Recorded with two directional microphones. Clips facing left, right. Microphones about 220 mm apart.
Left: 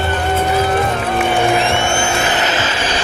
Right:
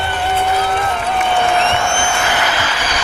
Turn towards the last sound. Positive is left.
turn(degrees=25)  # may be behind; listen again after turning